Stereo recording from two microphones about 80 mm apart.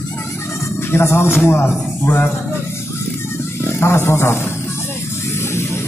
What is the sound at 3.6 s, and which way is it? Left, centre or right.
Speech, left.